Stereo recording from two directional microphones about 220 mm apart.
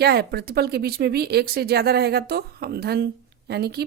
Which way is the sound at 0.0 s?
45° right (ahead or behind).